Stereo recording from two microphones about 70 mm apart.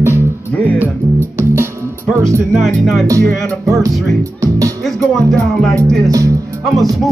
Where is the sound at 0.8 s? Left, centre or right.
Right.